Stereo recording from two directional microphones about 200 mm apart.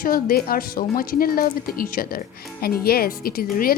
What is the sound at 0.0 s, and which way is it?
Speech, 45° left (ahead or behind).